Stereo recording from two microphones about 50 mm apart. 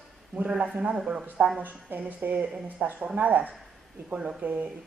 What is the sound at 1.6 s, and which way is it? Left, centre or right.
Speech, right.